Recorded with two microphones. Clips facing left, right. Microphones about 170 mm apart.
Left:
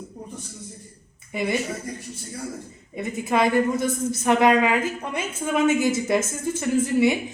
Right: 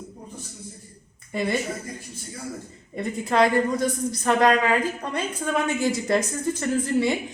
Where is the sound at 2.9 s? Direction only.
5° left (ahead or behind).